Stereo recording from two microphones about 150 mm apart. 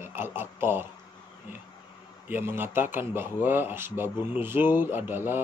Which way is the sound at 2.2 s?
15° right (ahead or behind).